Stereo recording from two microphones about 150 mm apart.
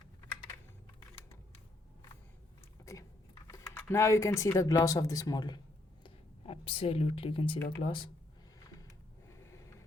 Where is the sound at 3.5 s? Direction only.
20° left (ahead or behind).